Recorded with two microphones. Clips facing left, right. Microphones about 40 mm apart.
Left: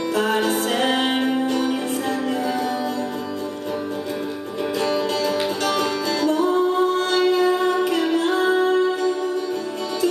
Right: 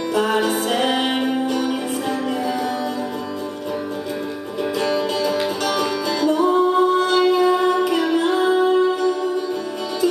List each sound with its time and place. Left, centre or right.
0.1 s music: centre
4.7 s music: centre